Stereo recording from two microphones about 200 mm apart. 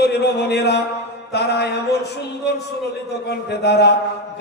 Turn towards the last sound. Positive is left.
turn(degrees=55)  # may be behind; listen again after turning